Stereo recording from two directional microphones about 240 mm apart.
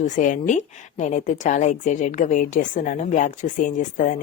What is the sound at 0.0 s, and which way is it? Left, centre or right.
A woman's voice, left.